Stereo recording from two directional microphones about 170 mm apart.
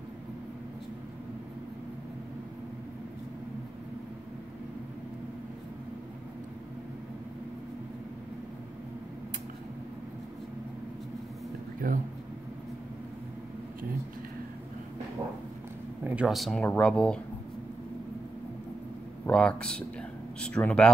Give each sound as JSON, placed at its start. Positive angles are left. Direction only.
{"t": 11.8, "sound": "a sound", "side_deg": -55}
{"t": 16.0, "sound": "speech", "side_deg": -5}
{"t": 19.2, "sound": "speech", "side_deg": 5}